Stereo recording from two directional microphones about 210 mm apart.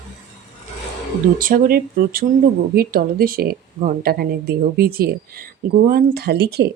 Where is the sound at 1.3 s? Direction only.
40° right (ahead or behind).